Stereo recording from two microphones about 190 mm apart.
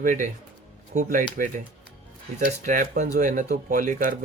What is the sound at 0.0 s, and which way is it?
Speech, 45° right (ahead or behind).